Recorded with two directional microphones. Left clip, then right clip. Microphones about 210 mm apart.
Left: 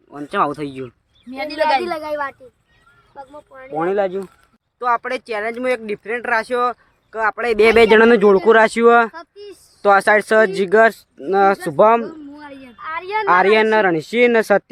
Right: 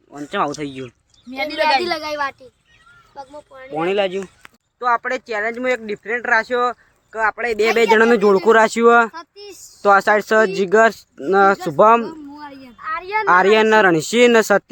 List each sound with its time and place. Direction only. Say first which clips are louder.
0.1 s speech: left 2 dB; 5° left (ahead or behind)
1.3 s a man's voice: right 1 dB; 40° left (ahead or behind)
1.8 s speech: right 1 dB; centre (ahead or behind)
7.3 s a man's voice: left 7 dB; 40° left (ahead or behind)
7.9 s speech: left 2 dB; 25° left (ahead or behind)
8.1 s speech: left 1 dB; 10° left (ahead or behind)
9.1 s speech: even; 20° right (ahead or behind)
9.8 s speech: left 1 dB; centre (ahead or behind)
12.3 s a sound: right 1 dB; 5° right (ahead or behind)
12.8 s a sound: right 1 dB; 30° left (ahead or behind)
13.2 s speech: even; 5° right (ahead or behind)